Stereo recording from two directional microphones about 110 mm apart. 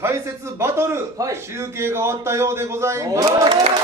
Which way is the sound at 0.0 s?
25° right (ahead or behind).